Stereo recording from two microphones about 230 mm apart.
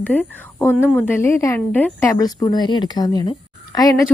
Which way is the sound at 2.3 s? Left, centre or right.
Centre.